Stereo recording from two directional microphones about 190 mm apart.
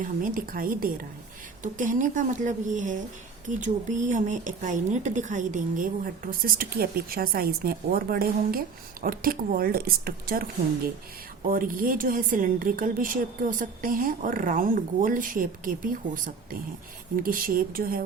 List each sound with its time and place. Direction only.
0.0 s a woman's voice: 45° right (ahead or behind)
11.4 s a woman's voice: 45° right (ahead or behind)